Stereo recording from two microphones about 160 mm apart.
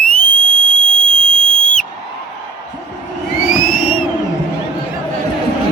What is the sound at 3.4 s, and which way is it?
Crowd, 60° left (ahead or behind).